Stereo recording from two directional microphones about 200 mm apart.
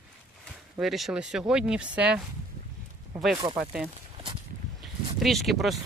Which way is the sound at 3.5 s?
5° right (ahead or behind).